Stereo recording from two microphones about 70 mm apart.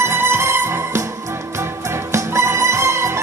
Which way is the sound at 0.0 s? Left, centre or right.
Right.